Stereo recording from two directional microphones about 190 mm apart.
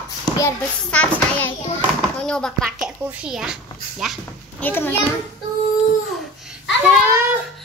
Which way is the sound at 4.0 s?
Centre (ahead or behind).